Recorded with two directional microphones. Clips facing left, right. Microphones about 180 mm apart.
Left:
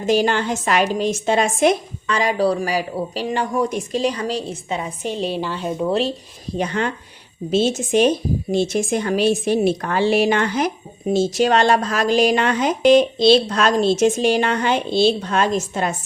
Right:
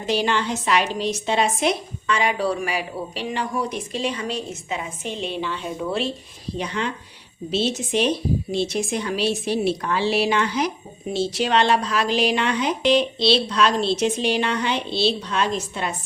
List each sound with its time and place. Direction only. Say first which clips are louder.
0.0 s a woman's voice: left 4 dB; 45° left (ahead or behind)
6.6 s a woman's voice: left 5 dB; 50° left (ahead or behind)